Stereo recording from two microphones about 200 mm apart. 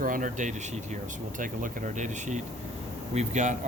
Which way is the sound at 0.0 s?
40° right (ahead or behind).